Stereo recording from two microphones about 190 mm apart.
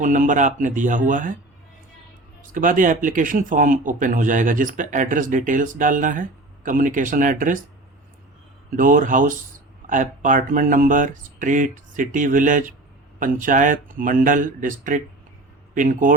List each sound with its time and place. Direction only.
0.0 s speech: 40° right (ahead or behind)
2.5 s speech: 45° right (ahead or behind)
8.7 s speech: 45° right (ahead or behind)